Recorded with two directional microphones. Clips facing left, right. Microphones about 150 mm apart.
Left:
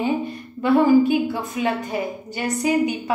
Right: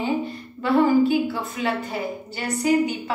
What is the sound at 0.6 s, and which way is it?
A woman's voice, 15° left (ahead or behind).